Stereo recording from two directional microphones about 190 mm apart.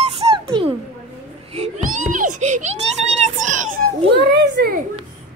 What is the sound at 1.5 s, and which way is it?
A child's voice, 35° right (ahead or behind).